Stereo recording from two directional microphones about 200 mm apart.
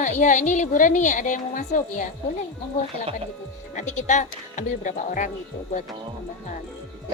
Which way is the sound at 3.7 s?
35° left (ahead or behind).